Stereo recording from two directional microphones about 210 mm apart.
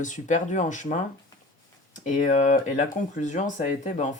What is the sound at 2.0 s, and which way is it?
Speech, 35° left (ahead or behind).